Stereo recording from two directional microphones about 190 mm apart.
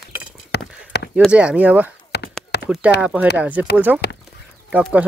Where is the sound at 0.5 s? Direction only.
60° left (ahead or behind).